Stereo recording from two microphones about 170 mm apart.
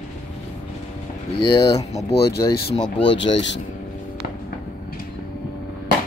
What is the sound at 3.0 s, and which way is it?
Speech, 90° left.